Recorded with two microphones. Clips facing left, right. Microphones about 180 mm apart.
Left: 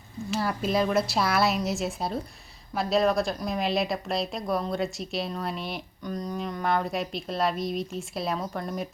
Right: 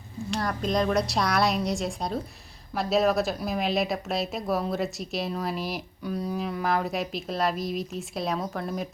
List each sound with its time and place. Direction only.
0.3 s speech: 5° left (ahead or behind)